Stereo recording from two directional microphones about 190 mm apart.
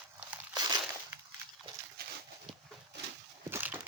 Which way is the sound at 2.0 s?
55° right (ahead or behind).